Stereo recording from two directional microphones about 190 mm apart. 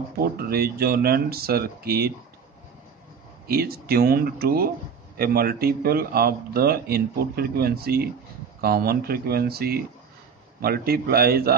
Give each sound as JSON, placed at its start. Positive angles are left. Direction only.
{"t": 0.4, "sound": "speech", "side_deg": -55}
{"t": 3.4, "sound": "speech", "side_deg": -55}